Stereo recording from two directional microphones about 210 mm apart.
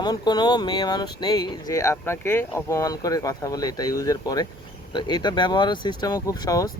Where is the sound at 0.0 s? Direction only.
20° left (ahead or behind).